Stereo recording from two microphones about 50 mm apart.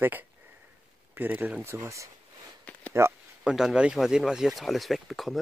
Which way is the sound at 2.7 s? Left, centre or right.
Left.